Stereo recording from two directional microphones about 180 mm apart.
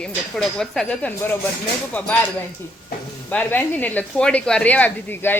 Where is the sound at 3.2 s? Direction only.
10° left (ahead or behind).